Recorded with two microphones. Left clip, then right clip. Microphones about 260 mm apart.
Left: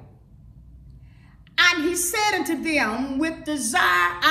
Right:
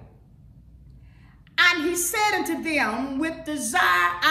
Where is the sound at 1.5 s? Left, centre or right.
Centre.